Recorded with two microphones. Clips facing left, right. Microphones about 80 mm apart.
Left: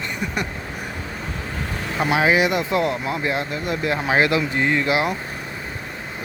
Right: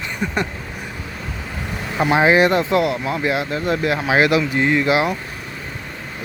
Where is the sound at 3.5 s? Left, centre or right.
Right.